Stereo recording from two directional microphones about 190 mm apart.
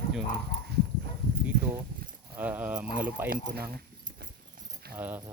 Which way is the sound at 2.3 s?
10° right (ahead or behind).